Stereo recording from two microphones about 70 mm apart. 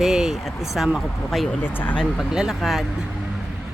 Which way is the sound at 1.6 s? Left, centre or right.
Left.